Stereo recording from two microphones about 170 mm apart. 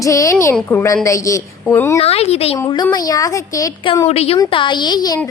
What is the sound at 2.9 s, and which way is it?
Speech, 20° left (ahead or behind).